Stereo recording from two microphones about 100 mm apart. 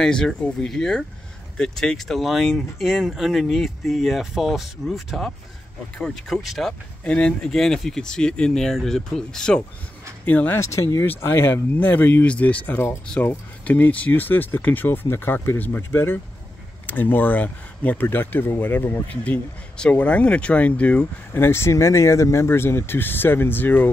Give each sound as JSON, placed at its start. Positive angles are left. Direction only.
{"t": 0.0, "sound": "speech", "side_deg": 5}
{"t": 10.2, "sound": "speech", "side_deg": 15}
{"t": 10.6, "sound": "speech", "side_deg": 30}
{"t": 21.3, "sound": "speech", "side_deg": 25}